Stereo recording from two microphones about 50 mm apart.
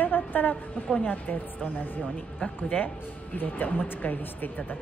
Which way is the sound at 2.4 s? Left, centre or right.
Left.